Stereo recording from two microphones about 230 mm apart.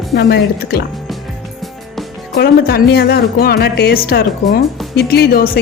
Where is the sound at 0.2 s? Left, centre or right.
Left.